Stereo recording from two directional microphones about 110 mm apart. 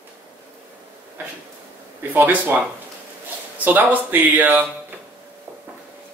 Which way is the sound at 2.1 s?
20° right (ahead or behind).